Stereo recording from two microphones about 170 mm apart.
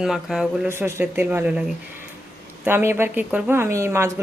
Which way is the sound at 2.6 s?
15° right (ahead or behind).